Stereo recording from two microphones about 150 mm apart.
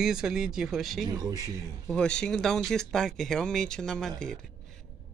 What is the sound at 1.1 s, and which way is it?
Speech, 25° right (ahead or behind).